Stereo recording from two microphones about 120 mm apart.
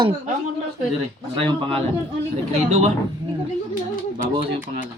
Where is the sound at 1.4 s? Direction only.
50° right (ahead or behind).